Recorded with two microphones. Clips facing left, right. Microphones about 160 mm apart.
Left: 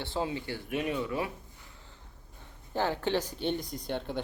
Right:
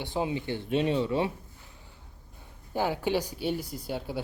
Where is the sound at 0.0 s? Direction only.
15° right (ahead or behind).